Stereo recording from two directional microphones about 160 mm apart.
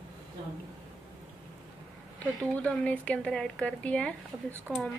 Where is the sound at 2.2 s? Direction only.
10° left (ahead or behind).